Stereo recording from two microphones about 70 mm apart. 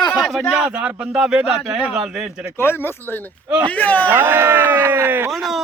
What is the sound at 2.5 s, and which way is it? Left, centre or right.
Speech, left.